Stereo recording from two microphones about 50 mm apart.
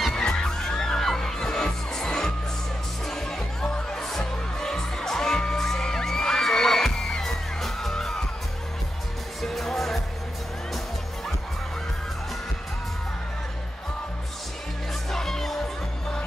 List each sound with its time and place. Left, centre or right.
0.1 s music: centre
9.4 s music: centre
15.0 s music: centre